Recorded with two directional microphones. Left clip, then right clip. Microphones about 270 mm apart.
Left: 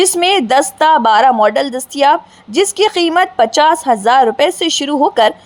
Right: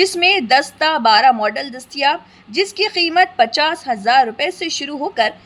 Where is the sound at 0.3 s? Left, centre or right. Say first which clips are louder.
Left 3 dB; centre.